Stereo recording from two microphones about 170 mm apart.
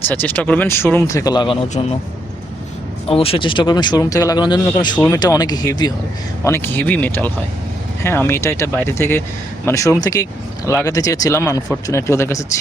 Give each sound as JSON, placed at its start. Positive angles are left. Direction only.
{"t": 0.1, "sound": "speech", "side_deg": 10}
{"t": 3.1, "sound": "speech", "side_deg": 35}
{"t": 4.9, "sound": "speech", "side_deg": 10}
{"t": 5.2, "sound": "speech", "side_deg": 25}